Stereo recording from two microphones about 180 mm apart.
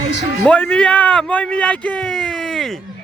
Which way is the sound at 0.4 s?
5° left (ahead or behind).